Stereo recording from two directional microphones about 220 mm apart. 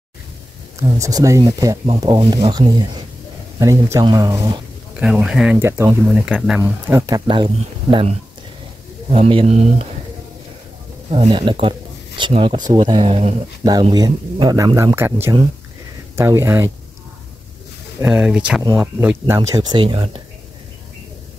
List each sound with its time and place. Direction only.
0.7 s speech: 15° right (ahead or behind)
4.9 s speech: 5° right (ahead or behind)
6.6 s speech: 15° right (ahead or behind)
11.1 s speech: 25° right (ahead or behind)
13.7 s speech: 20° right (ahead or behind)
18.0 s speech: 5° right (ahead or behind); by 20.2 s 25° right (ahead or behind)